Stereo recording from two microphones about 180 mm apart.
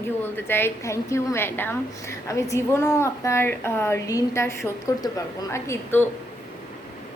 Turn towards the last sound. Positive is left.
turn(degrees=15)  # may be behind; listen again after turning